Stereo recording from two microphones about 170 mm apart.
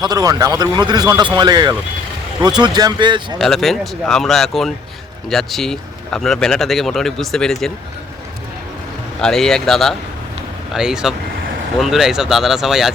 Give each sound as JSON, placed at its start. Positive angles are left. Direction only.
{"t": 0.0, "sound": "a man's voice", "side_deg": -25}
{"t": 3.3, "sound": "speech", "side_deg": 0}
{"t": 9.2, "sound": "speech", "side_deg": 5}